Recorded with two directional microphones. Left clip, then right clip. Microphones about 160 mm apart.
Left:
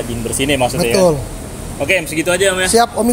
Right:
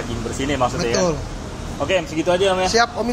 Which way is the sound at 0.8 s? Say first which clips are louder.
Left 7 dB; 90° left.